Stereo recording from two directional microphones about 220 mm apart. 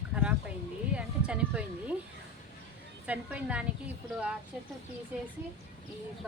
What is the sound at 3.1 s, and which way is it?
Speech, 5° right (ahead or behind).